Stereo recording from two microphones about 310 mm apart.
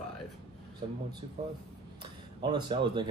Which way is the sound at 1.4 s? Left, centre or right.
Centre.